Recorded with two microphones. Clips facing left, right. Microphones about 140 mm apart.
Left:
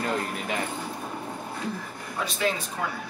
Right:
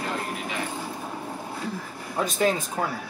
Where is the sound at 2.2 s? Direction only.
45° right (ahead or behind).